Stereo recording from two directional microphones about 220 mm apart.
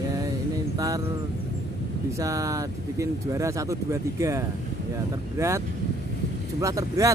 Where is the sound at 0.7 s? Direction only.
15° right (ahead or behind).